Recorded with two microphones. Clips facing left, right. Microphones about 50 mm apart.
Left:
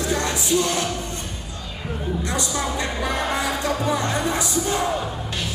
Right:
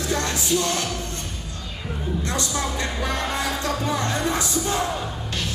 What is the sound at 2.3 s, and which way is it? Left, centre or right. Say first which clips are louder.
Speech: left 1 dB; centre.